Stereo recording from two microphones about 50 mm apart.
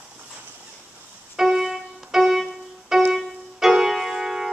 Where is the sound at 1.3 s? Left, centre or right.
Centre.